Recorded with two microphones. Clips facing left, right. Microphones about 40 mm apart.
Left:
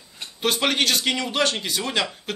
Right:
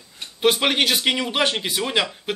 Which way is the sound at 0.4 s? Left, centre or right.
Centre.